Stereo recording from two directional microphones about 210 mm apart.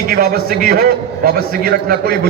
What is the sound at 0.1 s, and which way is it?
A man's voice, 45° right (ahead or behind).